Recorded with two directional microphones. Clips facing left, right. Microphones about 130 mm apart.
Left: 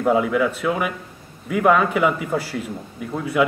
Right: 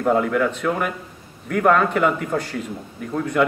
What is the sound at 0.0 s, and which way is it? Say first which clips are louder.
A man's voice: even; 5° left (ahead or behind).